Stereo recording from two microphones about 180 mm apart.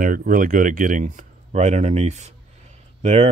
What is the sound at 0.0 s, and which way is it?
Speech, 50° right (ahead or behind).